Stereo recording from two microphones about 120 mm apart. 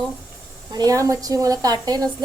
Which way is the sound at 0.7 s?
30° right (ahead or behind).